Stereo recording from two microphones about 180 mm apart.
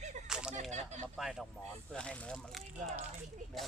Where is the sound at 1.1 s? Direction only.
Centre (ahead or behind).